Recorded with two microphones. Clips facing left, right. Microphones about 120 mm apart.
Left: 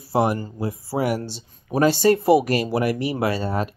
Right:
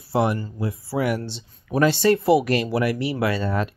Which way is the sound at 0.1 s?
40° left (ahead or behind).